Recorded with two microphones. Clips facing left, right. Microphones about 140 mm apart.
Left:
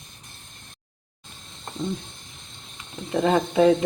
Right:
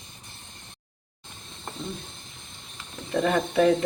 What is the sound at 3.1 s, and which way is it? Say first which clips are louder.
Speech: left 3 dB; 25° left (ahead or behind).